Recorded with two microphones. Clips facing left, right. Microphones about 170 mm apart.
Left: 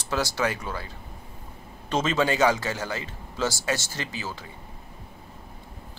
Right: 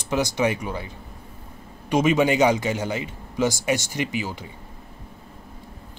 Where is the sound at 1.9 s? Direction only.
15° right (ahead or behind).